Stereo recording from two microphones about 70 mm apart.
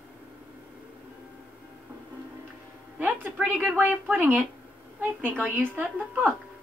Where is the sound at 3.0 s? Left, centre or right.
Right.